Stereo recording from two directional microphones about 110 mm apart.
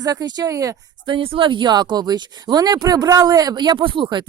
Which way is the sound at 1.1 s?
50° right (ahead or behind).